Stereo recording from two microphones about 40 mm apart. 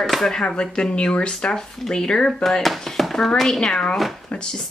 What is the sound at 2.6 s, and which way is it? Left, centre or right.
Speech, centre.